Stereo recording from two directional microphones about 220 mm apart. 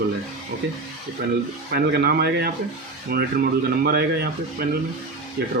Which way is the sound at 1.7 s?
45° right (ahead or behind).